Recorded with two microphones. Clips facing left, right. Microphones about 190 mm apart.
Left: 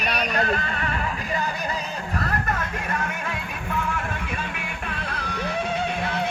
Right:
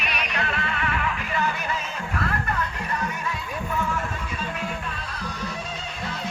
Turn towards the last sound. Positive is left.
turn(degrees=60)  # may be behind; listen again after turning